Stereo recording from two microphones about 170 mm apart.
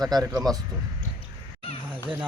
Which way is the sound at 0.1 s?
20° right (ahead or behind).